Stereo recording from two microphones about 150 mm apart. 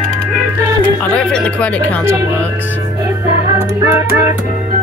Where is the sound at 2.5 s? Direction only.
15° right (ahead or behind).